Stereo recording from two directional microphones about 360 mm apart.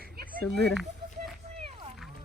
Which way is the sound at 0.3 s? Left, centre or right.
Centre.